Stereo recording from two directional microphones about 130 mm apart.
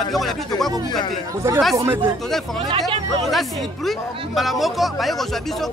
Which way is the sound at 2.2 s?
Centre (ahead or behind).